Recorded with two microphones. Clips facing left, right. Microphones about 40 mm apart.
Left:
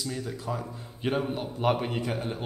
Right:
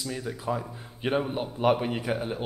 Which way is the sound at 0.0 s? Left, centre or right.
Centre.